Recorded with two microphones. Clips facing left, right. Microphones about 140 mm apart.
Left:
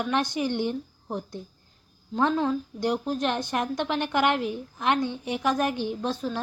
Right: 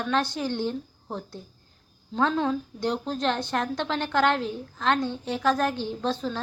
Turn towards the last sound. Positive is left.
turn(degrees=10)  # may be behind; listen again after turning